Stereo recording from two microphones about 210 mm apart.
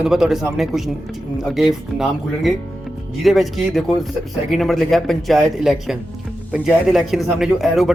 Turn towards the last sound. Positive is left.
turn(degrees=0)  # may be behind; listen again after turning